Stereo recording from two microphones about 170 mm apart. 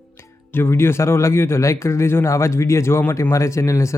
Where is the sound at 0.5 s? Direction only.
15° left (ahead or behind).